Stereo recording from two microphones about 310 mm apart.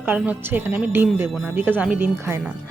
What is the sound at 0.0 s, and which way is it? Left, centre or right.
Speech, centre.